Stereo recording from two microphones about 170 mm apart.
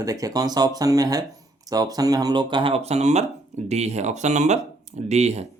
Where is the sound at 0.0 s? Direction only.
20° right (ahead or behind).